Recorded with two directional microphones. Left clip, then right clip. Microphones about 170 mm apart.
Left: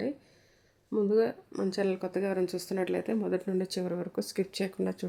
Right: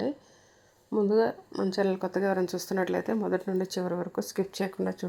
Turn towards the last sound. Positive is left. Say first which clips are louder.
# right 2 dB
turn(degrees=0)  # may be behind; listen again after turning